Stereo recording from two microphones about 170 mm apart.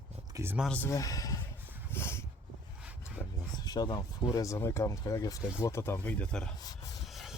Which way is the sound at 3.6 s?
25° left (ahead or behind).